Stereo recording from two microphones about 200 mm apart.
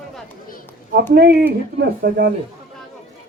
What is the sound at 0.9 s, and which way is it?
Speech, 50° right (ahead or behind).